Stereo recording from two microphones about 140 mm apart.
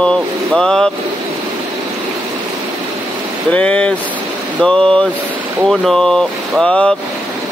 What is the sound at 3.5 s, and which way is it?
Speech, 10° left (ahead or behind).